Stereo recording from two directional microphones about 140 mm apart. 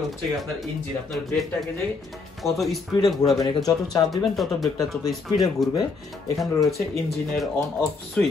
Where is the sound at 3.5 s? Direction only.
25° left (ahead or behind).